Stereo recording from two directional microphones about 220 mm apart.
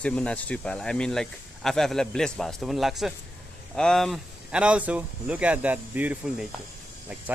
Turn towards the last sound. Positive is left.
turn(degrees=-5)  # may be behind; listen again after turning